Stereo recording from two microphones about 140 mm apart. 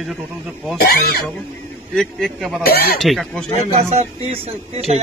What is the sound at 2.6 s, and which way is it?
Speech, 90° left.